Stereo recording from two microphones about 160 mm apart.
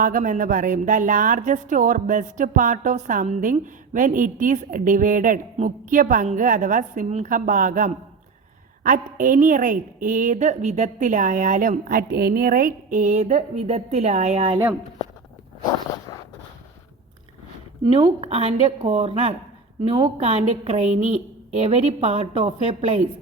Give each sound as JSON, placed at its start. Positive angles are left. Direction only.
{"t": 0.0, "sound": "a woman's voice", "side_deg": -55}
{"t": 18.2, "sound": "a woman's voice", "side_deg": -40}